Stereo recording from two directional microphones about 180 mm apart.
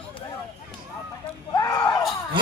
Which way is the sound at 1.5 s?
20° left (ahead or behind).